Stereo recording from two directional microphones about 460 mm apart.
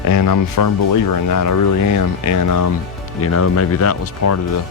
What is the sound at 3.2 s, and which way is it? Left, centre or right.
Speech, left.